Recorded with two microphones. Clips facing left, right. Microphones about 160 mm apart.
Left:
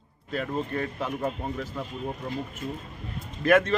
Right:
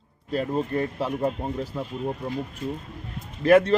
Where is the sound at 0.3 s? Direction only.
35° right (ahead or behind).